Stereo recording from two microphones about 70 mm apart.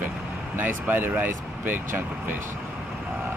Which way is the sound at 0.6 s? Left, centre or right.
Right.